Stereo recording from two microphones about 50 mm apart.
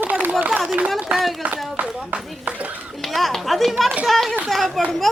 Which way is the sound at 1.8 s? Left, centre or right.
Right.